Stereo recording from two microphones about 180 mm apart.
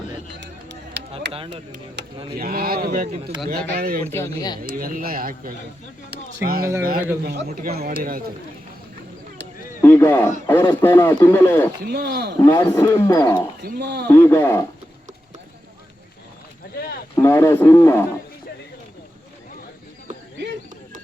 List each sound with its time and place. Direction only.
0.3 s chop: 75° right (ahead or behind)
1.5 s speech: 75° right (ahead or behind)
2.3 s speech: 55° right (ahead or behind)
4.0 s speech: 15° left (ahead or behind)
4.7 s speech: 50° right (ahead or behind)
9.8 s a man's voice: 10° left (ahead or behind)
11.9 s speech: 65° right (ahead or behind)
12.5 s speech: 15° left (ahead or behind)
13.6 s speech: 65° right (ahead or behind)
14.1 s a man's voice: 15° left (ahead or behind)
16.7 s a sound: 55° left (ahead or behind)
17.2 s a man's voice: 15° left (ahead or behind)